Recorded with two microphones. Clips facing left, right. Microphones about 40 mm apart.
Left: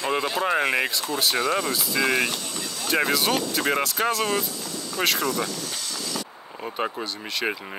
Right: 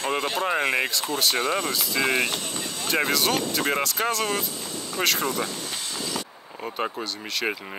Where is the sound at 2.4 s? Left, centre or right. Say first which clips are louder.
Right 1 dB; right.